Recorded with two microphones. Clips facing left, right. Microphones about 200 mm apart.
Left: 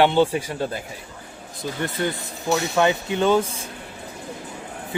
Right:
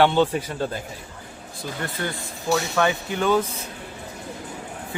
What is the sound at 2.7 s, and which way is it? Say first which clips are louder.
Speech: left 2 dB; 20° left (ahead or behind).